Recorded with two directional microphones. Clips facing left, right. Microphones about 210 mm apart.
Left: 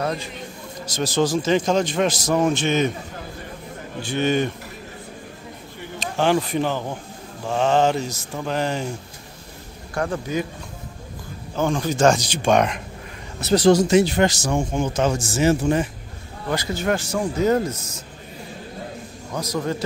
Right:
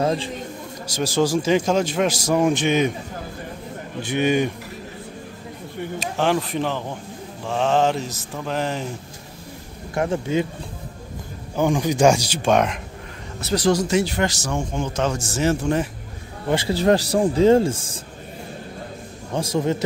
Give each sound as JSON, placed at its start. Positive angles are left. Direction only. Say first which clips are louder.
{"t": 0.0, "sound": "a man's voice", "louder": "right 4 dB", "side_deg": -30}
{"t": 0.8, "sound": "a man's voice", "louder": "even", "side_deg": -10}
{"t": 4.0, "sound": "a man's voice", "louder": "right 1 dB", "side_deg": -15}
{"t": 5.9, "sound": "mantra", "louder": "left 2 dB", "side_deg": 0}
{"t": 9.9, "sound": "speech", "louder": "right 3 dB", "side_deg": -25}
{"t": 11.5, "sound": "a man's voice", "louder": "right 2 dB", "side_deg": -15}
{"t": 13.4, "sound": "speech", "louder": "left 4 dB", "side_deg": 25}
{"t": 15.3, "sound": "mantra", "louder": "left 2 dB", "side_deg": 5}
{"t": 16.4, "sound": "speech", "louder": "right 5 dB", "side_deg": -30}
{"t": 19.3, "sound": "speech", "louder": "right 3 dB", "side_deg": -25}